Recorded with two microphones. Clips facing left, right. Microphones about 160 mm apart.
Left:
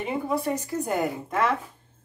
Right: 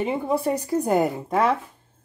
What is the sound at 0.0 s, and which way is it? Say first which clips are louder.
Speech: right 4 dB; 25° right (ahead or behind).